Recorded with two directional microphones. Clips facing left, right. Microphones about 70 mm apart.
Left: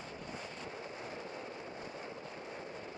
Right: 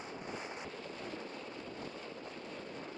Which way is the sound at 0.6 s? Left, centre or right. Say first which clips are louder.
Even; centre.